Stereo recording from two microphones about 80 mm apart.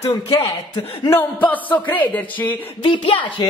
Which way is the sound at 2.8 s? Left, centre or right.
Left.